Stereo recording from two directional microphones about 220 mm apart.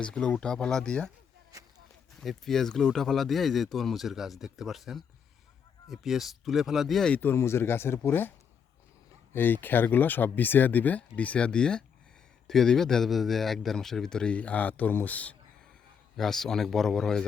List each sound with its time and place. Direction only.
0.0 s speech: 5° left (ahead or behind)
1.5 s a sound: 15° right (ahead or behind)
2.2 s speech: centre (ahead or behind)
9.3 s speech: 10° left (ahead or behind)